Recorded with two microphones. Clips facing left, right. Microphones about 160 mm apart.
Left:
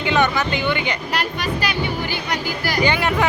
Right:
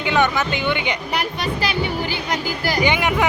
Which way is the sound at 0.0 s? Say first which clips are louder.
Even; 15° right (ahead or behind).